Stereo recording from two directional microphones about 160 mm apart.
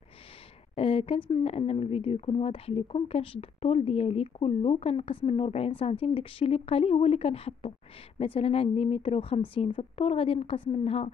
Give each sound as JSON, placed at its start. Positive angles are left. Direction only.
{"t": 0.7, "sound": "speech", "side_deg": 35}